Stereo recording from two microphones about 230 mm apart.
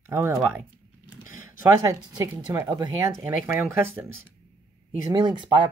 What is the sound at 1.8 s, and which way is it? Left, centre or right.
Speech, centre.